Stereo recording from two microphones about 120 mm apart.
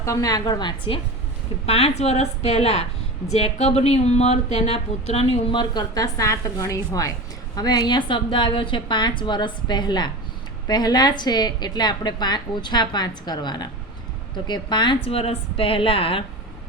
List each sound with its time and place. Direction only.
0.0 s a woman's voice: 25° left (ahead or behind)
1.6 s a woman's voice: 60° left (ahead or behind)